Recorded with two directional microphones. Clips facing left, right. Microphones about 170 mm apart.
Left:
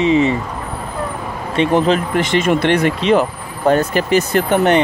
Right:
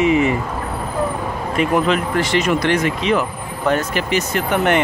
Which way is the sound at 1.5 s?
30° left (ahead or behind).